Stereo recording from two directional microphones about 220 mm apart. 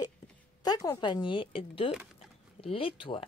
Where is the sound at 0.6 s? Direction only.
15° left (ahead or behind).